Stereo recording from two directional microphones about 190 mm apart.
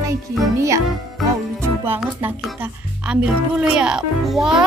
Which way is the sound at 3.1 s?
5° right (ahead or behind).